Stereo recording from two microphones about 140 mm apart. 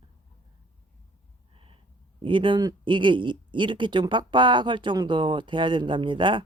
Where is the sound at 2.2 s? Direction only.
35° right (ahead or behind).